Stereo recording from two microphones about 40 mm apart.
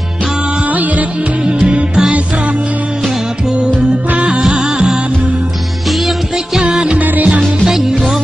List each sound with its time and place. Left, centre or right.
0.7 s music: right
1.4 s music: right
3.0 s music: centre
5.9 s music: centre
6.3 s music: centre
7.0 s music: right
7.2 s music: right